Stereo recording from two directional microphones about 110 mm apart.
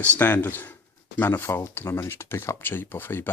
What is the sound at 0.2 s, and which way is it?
Speech, 20° left (ahead or behind).